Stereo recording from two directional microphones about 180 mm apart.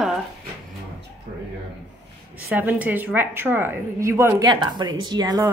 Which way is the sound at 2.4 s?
10° right (ahead or behind).